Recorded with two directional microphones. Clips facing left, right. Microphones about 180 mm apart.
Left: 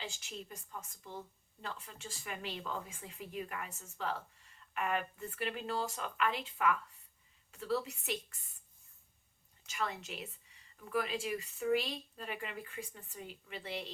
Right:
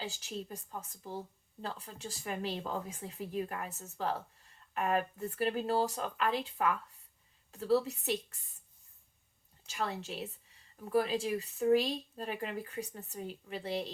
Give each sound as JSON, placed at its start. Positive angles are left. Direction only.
{"t": 0.0, "sound": "speech", "side_deg": -35}
{"t": 9.6, "sound": "speech", "side_deg": -35}